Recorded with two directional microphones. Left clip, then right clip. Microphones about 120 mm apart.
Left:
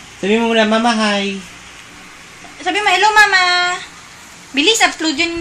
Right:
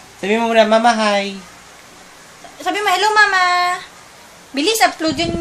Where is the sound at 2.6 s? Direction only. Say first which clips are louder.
Left 3 dB; 50° right (ahead or behind).